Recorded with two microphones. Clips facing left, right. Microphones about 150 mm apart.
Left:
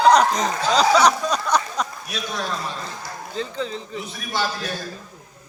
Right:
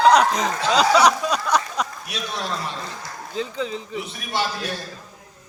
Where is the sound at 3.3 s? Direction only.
5° right (ahead or behind).